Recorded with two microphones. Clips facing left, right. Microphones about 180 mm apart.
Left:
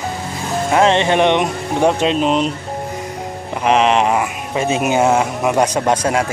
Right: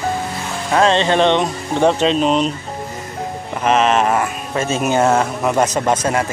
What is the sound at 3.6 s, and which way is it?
Speech, 15° left (ahead or behind).